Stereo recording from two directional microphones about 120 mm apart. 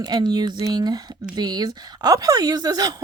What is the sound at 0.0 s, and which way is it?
Speech, 35° right (ahead or behind).